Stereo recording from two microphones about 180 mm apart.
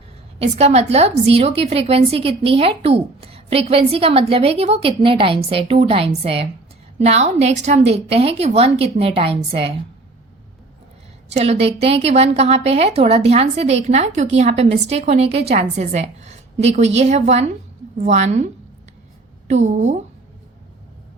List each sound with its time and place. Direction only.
0.3 s speech: 35° right (ahead or behind)
11.3 s speech: 35° right (ahead or behind)
19.6 s speech: 40° right (ahead or behind)